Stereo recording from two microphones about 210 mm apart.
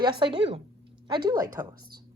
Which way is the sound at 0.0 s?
20° right (ahead or behind).